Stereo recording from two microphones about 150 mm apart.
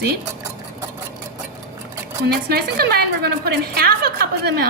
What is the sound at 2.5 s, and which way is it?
A woman's voice, 90° right.